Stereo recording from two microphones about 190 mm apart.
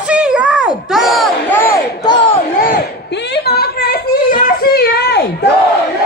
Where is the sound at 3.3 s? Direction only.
55° left (ahead or behind).